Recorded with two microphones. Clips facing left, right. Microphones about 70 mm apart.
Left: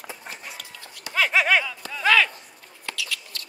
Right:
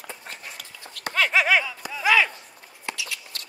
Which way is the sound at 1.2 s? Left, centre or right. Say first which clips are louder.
Even; centre.